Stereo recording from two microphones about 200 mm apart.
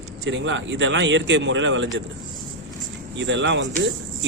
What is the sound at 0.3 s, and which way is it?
Speech, 70° right (ahead or behind).